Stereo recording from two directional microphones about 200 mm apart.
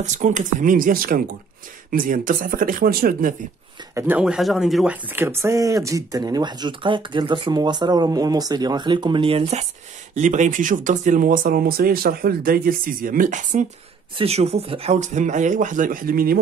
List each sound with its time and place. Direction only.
0.0 s speech: 40° right (ahead or behind)
3.9 s speech: 5° right (ahead or behind); by 16.3 s 45° right (ahead or behind)